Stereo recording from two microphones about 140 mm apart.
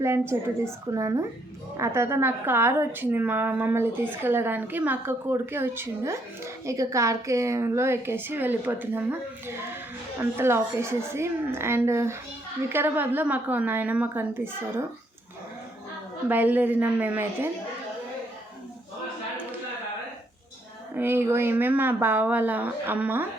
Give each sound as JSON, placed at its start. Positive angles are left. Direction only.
{"t": 0.0, "sound": "a woman's voice", "side_deg": -20}
{"t": 16.3, "sound": "a woman's voice", "side_deg": -10}
{"t": 20.9, "sound": "a woman's voice", "side_deg": -15}